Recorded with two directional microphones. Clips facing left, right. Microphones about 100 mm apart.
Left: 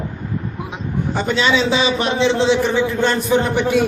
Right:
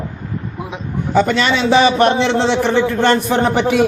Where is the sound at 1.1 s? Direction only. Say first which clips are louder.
Right 4 dB; 80° right.